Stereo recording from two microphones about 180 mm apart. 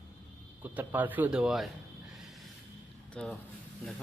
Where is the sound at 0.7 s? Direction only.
10° right (ahead or behind).